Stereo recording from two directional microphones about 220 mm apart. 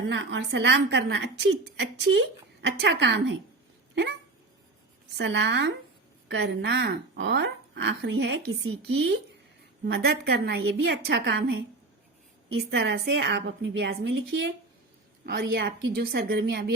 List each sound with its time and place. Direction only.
0.1 s a woman's voice: 55° right (ahead or behind)
5.1 s a woman's voice: 55° right (ahead or behind)